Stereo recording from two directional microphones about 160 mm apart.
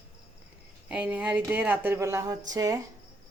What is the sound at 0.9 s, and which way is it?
Speech, 10° right (ahead or behind).